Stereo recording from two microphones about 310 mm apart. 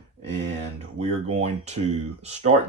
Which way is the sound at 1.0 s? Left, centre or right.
Centre.